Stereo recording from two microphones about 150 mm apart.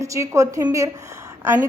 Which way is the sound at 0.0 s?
20° right (ahead or behind).